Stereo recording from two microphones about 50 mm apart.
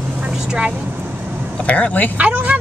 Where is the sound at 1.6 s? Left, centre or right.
Left.